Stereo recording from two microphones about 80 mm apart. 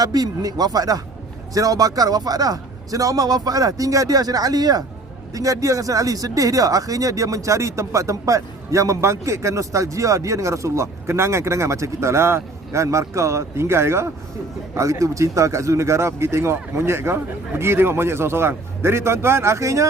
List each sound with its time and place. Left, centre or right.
0.0 s a man's voice: right
5.3 s speech: right